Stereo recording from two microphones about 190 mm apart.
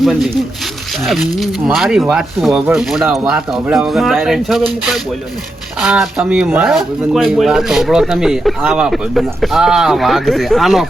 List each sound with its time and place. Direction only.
0.0 s speech: centre (ahead or behind)